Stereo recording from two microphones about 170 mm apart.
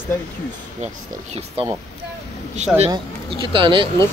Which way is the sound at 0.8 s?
40° right (ahead or behind).